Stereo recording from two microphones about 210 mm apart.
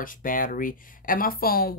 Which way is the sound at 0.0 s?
40° left (ahead or behind).